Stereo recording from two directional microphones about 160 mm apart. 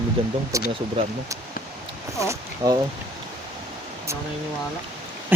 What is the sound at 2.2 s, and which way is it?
Speech, 20° right (ahead or behind).